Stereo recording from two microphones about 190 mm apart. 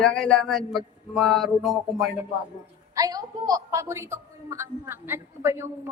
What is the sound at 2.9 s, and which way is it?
A woman's voice, 20° right (ahead or behind).